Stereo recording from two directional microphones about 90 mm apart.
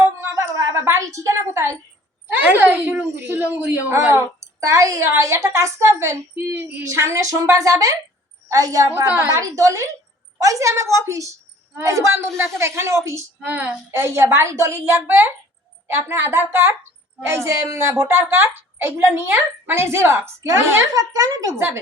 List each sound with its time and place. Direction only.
0.0 s a sound: 30° right (ahead or behind)
2.4 s a woman's voice: 20° right (ahead or behind)
6.8 s a woman's voice: 35° right (ahead or behind)
13.5 s a woman's voice: 20° right (ahead or behind)
20.9 s a woman's voice: 40° right (ahead or behind)